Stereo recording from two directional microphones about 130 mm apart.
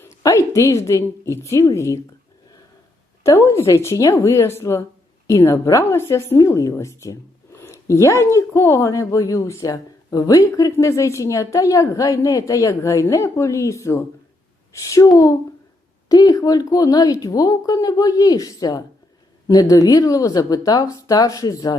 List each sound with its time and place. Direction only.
0.2 s speech: 25° left (ahead or behind)
3.2 s a woman's voice: 20° left (ahead or behind)